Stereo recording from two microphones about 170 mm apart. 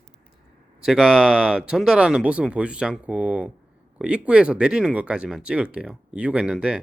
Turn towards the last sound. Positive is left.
turn(degrees=-5)  # may be behind; listen again after turning